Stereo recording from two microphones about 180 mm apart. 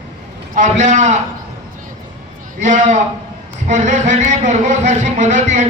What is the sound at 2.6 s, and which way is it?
A man's voice, 40° right (ahead or behind).